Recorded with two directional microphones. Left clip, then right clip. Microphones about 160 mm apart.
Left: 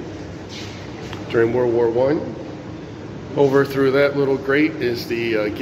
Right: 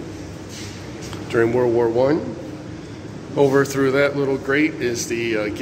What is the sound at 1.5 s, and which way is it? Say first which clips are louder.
Speech: even; 20° right (ahead or behind).